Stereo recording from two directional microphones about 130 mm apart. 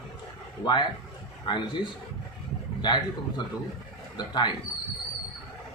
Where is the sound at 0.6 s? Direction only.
35° left (ahead or behind).